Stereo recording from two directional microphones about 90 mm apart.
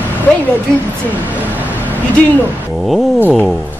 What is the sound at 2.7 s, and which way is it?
Speech, centre (ahead or behind).